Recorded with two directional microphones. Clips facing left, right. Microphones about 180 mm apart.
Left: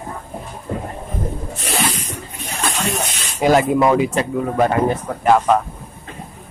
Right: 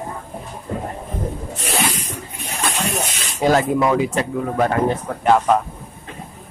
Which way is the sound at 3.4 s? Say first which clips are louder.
Left 2 dB; 15° left (ahead or behind).